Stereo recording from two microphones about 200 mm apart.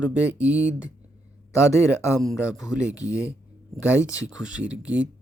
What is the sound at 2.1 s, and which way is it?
Speech, centre (ahead or behind).